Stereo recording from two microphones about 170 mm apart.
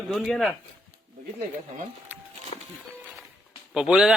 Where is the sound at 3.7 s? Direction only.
5° right (ahead or behind).